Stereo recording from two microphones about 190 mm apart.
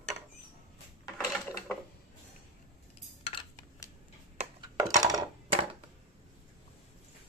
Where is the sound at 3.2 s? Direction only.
25° left (ahead or behind).